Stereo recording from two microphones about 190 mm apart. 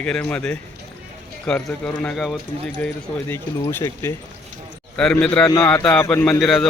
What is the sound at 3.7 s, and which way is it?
Speech, 15° left (ahead or behind).